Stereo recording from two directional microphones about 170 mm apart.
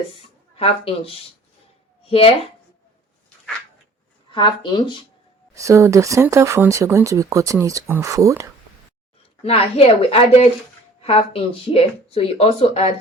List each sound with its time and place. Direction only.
0.5 s speech: 35° left (ahead or behind)
4.3 s speech: 25° left (ahead or behind)
5.5 s speech: 15° right (ahead or behind)
9.4 s speech: 35° left (ahead or behind)